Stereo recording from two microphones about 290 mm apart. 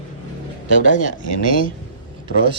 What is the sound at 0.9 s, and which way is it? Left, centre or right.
Speech, left.